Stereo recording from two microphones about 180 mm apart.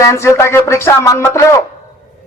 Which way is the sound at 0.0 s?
15° left (ahead or behind).